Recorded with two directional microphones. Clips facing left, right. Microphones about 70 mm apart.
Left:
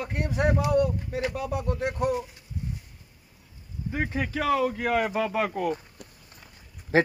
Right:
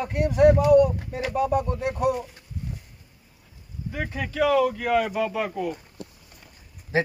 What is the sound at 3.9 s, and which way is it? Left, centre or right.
Speech, left.